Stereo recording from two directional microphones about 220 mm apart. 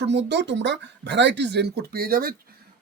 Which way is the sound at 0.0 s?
50° right (ahead or behind).